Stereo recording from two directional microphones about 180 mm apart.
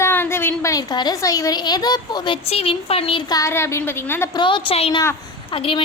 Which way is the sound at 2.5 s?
35° left (ahead or behind).